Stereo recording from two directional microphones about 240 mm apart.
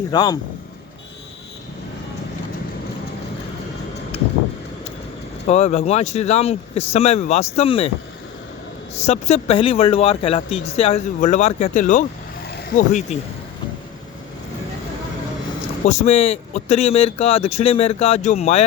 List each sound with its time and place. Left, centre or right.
0.1 s speech: centre
5.5 s speech: left
9.0 s speech: left
15.9 s speech: left